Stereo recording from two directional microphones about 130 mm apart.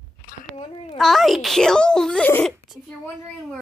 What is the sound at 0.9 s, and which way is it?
Speech, centre (ahead or behind).